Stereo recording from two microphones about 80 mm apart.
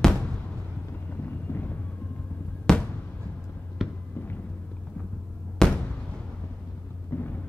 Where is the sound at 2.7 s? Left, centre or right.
Centre.